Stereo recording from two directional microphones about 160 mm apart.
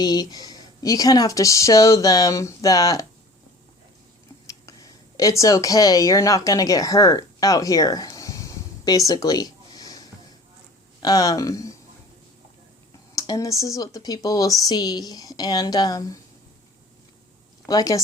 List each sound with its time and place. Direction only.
0.0 s speech: 25° left (ahead or behind)
4.4 s a woman's voice: 20° left (ahead or behind)
13.1 s speech: 20° left (ahead or behind)
17.7 s speech: 20° left (ahead or behind)